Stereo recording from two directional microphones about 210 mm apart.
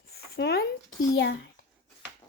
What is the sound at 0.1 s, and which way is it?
Speech, 50° left (ahead or behind).